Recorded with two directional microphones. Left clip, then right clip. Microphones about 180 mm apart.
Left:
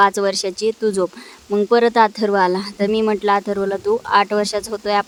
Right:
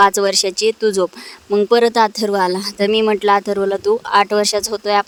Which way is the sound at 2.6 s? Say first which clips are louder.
Right 3 dB; 40° right (ahead or behind).